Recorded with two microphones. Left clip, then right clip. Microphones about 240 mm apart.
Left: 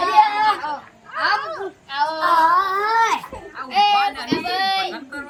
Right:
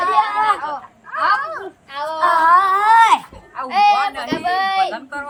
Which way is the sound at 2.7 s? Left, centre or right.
Right.